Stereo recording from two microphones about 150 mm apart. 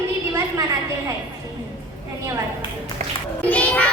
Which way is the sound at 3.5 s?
10° left (ahead or behind).